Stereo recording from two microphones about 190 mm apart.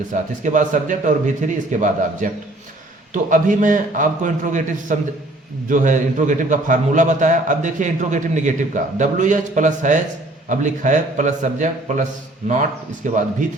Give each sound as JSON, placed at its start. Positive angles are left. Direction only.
{"t": 0.1, "sound": "a man's voice", "side_deg": -40}
{"t": 13.0, "sound": "a man's voice", "side_deg": -40}